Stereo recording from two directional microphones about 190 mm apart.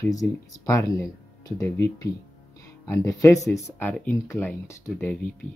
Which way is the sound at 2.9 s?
15° left (ahead or behind).